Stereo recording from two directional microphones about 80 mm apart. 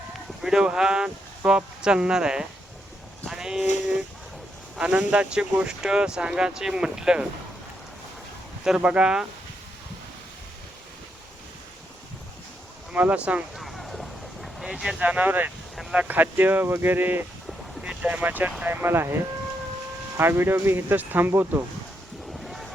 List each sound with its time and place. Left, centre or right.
0.4 s speech: centre
8.6 s speech: centre
12.9 s speech: centre
13.6 s boat: centre
14.6 s speech: centre
15.0 s speech: right
15.7 s a sound: centre
16.0 s speech: right
20.1 s speech: right
22.3 s a sound: centre